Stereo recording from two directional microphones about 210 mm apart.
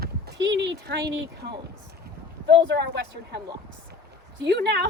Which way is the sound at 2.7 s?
55° right (ahead or behind).